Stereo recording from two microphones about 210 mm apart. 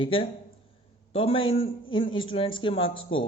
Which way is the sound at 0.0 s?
25° left (ahead or behind).